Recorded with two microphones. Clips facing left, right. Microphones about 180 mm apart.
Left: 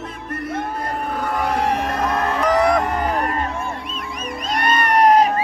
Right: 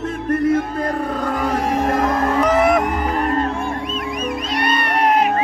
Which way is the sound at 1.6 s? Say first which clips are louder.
Right 1 dB; 65° left (ahead or behind).